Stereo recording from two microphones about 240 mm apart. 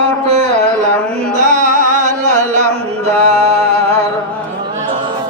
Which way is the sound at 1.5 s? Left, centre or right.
Right.